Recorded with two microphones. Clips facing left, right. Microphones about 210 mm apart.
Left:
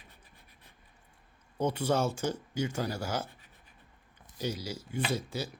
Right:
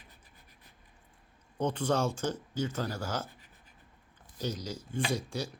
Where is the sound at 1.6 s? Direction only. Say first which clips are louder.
Left 1 dB; 10° left (ahead or behind).